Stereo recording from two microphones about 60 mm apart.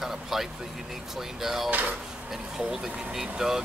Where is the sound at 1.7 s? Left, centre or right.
Right.